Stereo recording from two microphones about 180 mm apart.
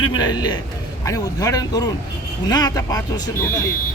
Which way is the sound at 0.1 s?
25° left (ahead or behind).